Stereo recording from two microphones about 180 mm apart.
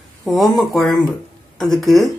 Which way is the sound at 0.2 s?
Centre (ahead or behind).